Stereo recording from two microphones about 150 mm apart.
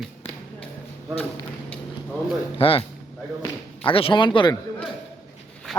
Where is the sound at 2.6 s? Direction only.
40° left (ahead or behind).